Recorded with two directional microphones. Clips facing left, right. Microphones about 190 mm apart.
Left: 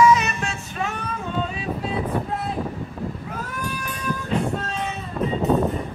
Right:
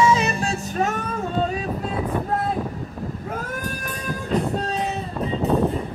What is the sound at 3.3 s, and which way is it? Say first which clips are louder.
Music: right 1 dB; 45° right (ahead or behind).